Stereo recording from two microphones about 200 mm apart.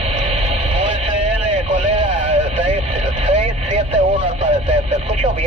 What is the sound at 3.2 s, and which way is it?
Speech, 35° right (ahead or behind).